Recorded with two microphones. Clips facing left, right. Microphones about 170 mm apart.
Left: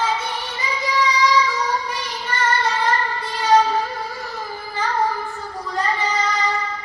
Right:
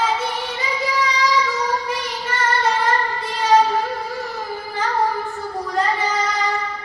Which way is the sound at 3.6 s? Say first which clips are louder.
Right 2 dB; 20° right (ahead or behind).